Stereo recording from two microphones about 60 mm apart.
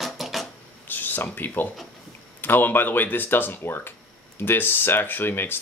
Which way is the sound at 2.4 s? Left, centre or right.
Left.